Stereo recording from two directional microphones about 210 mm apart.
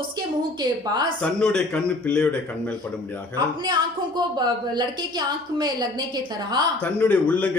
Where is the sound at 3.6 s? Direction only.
20° right (ahead or behind).